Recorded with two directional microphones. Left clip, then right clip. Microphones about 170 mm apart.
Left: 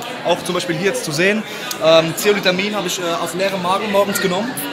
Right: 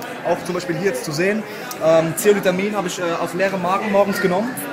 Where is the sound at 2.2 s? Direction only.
45° right (ahead or behind).